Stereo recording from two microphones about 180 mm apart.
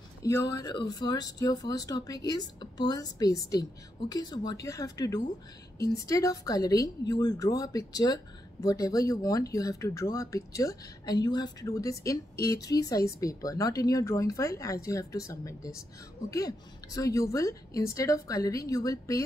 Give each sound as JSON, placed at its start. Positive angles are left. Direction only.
{"t": 0.2, "sound": "a woman's voice", "side_deg": 20}